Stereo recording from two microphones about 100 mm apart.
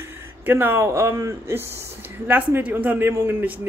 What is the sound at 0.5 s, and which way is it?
A man's voice, 20° right (ahead or behind).